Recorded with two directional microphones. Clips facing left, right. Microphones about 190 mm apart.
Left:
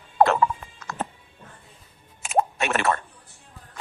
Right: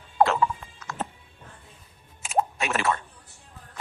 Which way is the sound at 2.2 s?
65° left (ahead or behind).